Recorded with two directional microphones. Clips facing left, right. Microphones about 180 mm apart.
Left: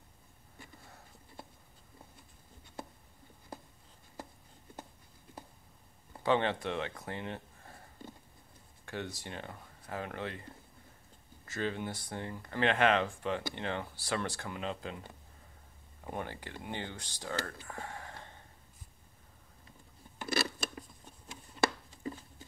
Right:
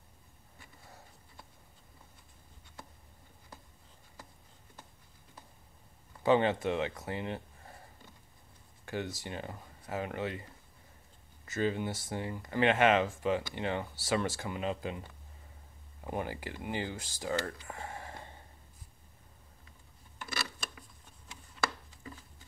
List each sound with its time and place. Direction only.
6.2 s speech: 5° right (ahead or behind)
8.8 s speech: centre (ahead or behind)
11.4 s speech: 5° right (ahead or behind)
20.2 s a sound: 35° left (ahead or behind)